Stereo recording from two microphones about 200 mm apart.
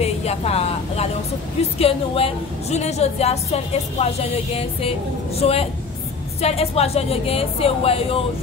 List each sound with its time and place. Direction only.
0.0 s a woman's voice: 30° left (ahead or behind)